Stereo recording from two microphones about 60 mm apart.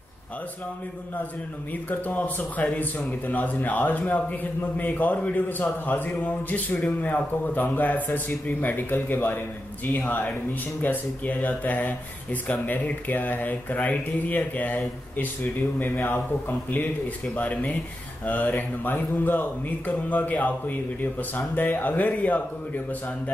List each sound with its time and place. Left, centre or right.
1.9 s a man's voice: left